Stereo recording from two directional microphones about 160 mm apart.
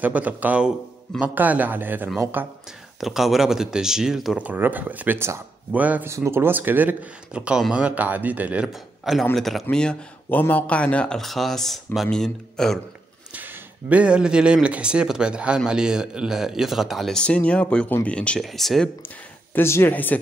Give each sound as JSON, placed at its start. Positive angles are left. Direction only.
{"t": 0.0, "sound": "a man's voice", "side_deg": -10}
{"t": 3.0, "sound": "speech", "side_deg": 0}
{"t": 13.3, "sound": "speech", "side_deg": -10}
{"t": 19.0, "sound": "speech", "side_deg": 15}